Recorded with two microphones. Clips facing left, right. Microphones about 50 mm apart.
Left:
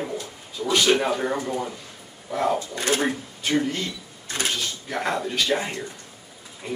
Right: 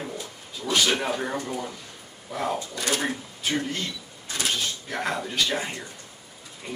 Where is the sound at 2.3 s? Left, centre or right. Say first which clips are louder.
Left 5 dB; centre.